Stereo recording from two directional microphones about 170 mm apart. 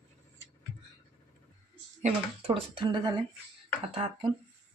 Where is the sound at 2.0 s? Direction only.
40° right (ahead or behind).